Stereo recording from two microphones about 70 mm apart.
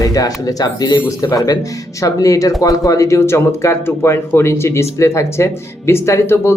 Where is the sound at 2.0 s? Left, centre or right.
Left.